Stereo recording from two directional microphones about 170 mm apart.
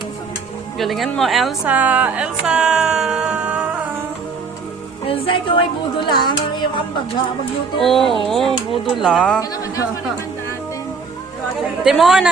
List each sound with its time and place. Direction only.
0.8 s a woman's voice: centre (ahead or behind)
5.0 s speech: 30° left (ahead or behind)
7.8 s a woman's voice: centre (ahead or behind)
11.8 s a woman's voice: centre (ahead or behind)